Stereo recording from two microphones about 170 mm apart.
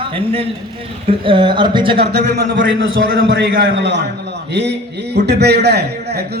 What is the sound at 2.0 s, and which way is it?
A man's voice, 75° right (ahead or behind).